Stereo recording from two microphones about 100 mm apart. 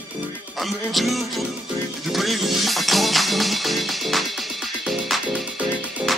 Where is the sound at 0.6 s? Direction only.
Centre (ahead or behind).